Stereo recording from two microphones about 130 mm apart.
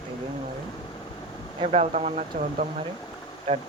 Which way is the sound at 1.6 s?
60° right (ahead or behind).